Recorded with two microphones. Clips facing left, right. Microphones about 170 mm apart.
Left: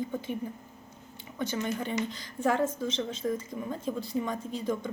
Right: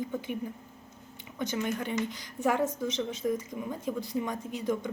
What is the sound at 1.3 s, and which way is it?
A woman's voice, 15° right (ahead or behind).